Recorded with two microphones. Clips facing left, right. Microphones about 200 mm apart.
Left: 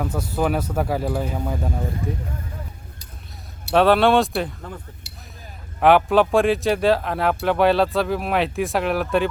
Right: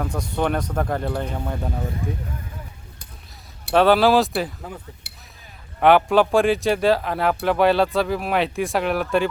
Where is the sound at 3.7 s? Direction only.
Centre (ahead or behind).